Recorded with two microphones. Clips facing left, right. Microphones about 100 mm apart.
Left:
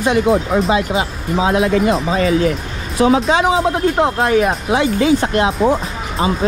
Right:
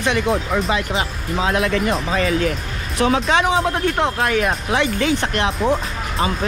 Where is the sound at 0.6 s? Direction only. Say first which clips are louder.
Left 5 dB; 30° left (ahead or behind).